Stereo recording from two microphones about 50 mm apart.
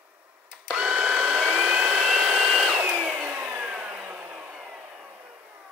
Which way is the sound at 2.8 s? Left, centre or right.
Right.